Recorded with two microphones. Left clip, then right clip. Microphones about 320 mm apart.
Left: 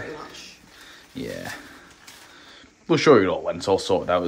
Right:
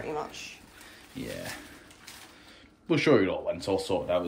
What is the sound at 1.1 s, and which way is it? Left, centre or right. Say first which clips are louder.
Speech: left 5 dB; centre.